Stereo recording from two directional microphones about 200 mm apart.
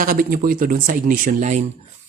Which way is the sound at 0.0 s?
45° right (ahead or behind).